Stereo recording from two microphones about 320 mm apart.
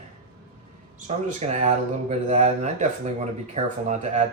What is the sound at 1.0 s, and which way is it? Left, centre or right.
Speech, right.